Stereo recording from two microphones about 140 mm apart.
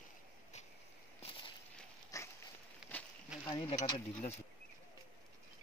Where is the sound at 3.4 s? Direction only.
35° left (ahead or behind).